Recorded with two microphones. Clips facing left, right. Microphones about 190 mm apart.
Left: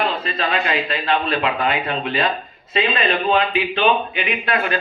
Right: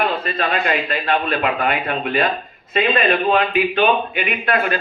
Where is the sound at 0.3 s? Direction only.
50° right (ahead or behind).